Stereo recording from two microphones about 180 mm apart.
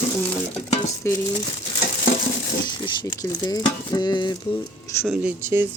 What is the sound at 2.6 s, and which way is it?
Zipper, 25° left (ahead or behind).